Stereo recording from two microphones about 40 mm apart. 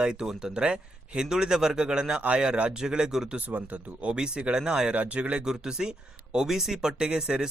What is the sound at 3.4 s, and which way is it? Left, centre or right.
Speech, right.